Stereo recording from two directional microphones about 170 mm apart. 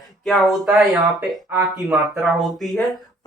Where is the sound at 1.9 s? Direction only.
Centre (ahead or behind).